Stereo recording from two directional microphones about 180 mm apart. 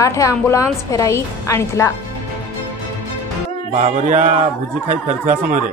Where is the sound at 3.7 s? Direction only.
40° right (ahead or behind).